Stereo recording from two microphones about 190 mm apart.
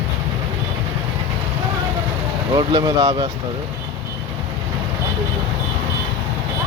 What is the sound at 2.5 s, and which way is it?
Speech, 20° right (ahead or behind).